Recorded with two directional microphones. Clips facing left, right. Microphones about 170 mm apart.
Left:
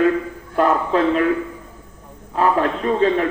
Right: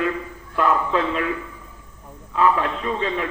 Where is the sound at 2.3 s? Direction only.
45° left (ahead or behind).